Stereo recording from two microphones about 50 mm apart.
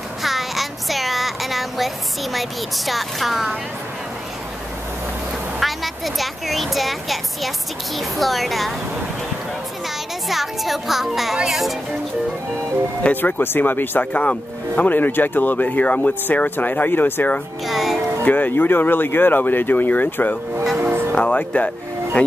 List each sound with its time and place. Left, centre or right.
0.2 s a sound: centre
2.3 s a woman's voice: centre
5.6 s a woman's voice: centre
10.2 s a woman's voice: centre
13.1 s speech: left
14.1 s speech: left
17.6 s music: centre
18.2 s speech: left
20.7 s music: right
21.1 s music: left